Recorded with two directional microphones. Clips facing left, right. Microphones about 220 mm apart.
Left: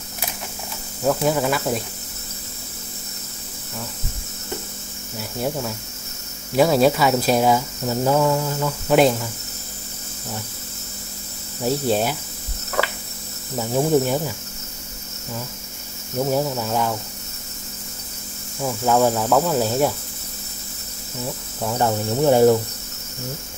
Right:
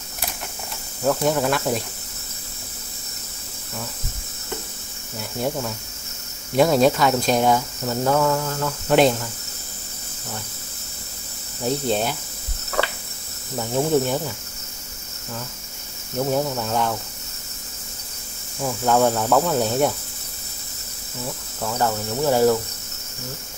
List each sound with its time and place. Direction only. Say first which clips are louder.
1.0 s speech: even; 5° left (ahead or behind)
6.5 s speech: even; 5° left (ahead or behind)
11.6 s speech: left 2 dB; 10° left (ahead or behind)
13.6 s speech: left 2 dB; 10° left (ahead or behind)
16.2 s speech: left 1 dB; 5° left (ahead or behind)
18.6 s speech: left 1 dB; 5° left (ahead or behind)
21.5 s speech: left 2 dB; 15° left (ahead or behind)